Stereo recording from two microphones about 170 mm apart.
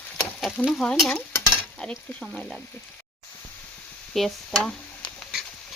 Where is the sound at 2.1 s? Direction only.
Centre (ahead or behind).